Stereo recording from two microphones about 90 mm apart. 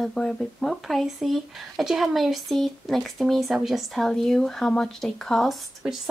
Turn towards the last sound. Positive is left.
turn(degrees=-10)  # may be behind; listen again after turning